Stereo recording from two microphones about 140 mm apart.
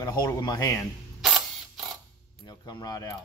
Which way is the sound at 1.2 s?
Centre (ahead or behind).